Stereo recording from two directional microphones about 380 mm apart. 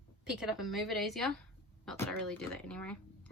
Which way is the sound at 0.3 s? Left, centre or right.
Centre.